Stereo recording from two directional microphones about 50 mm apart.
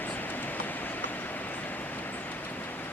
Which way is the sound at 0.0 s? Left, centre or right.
Left.